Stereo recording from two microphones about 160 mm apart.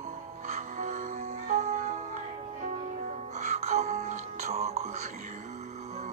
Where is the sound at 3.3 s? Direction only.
45° right (ahead or behind).